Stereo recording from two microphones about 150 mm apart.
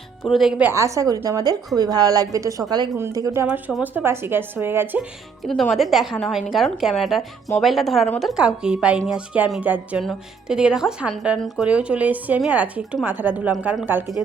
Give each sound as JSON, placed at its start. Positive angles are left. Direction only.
{"t": 0.2, "sound": "a woman's voice", "side_deg": 0}
{"t": 0.7, "sound": "a woman's voice", "side_deg": -20}
{"t": 5.5, "sound": "a woman's voice", "side_deg": 0}